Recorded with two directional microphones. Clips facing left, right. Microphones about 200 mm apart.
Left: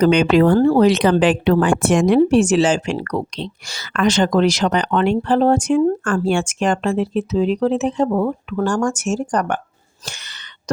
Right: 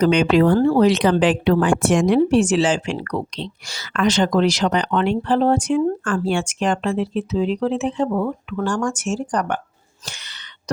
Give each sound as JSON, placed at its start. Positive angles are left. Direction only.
{"t": 0.0, "sound": "speech", "side_deg": 55}
{"t": 10.1, "sound": "throat clearing", "side_deg": 45}